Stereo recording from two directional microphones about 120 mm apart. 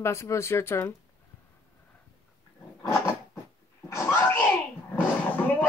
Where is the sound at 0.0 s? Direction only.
25° left (ahead or behind).